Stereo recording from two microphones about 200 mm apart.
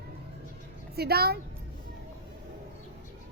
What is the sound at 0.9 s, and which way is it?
Speech, 50° right (ahead or behind).